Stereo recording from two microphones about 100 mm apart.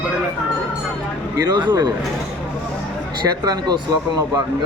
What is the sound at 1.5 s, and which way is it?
Speech, 50° right (ahead or behind).